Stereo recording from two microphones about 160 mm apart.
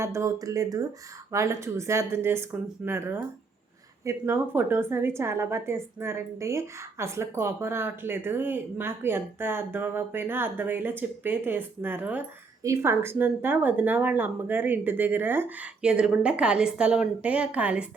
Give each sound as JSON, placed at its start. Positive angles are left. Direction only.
{"t": 0.0, "sound": "a woman's voice", "side_deg": -20}